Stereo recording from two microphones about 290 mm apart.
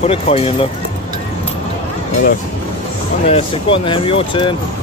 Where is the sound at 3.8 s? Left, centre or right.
Centre.